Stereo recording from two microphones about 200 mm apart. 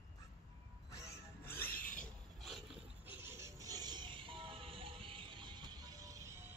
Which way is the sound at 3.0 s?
10° right (ahead or behind).